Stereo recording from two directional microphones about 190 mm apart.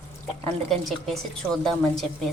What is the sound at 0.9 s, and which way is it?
Speech, centre (ahead or behind).